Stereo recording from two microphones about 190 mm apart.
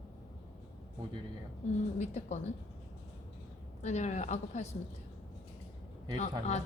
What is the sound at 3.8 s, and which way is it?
Speech, 35° left (ahead or behind).